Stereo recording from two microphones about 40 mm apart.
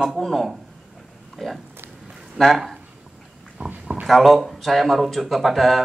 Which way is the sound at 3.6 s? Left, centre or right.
Right.